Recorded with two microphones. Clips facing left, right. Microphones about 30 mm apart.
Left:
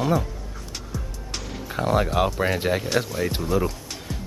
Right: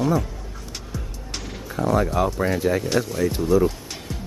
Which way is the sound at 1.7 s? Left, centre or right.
Left.